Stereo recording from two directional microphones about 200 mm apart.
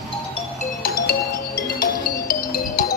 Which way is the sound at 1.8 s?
45° left (ahead or behind).